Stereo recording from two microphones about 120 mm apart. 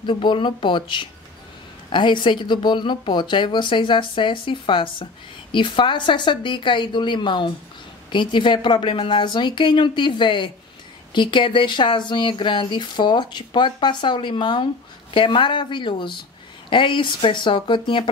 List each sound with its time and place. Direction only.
0.0 s speech: 40° left (ahead or behind)